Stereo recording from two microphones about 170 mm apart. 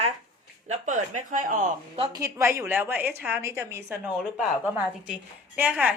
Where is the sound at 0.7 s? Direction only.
45° right (ahead or behind).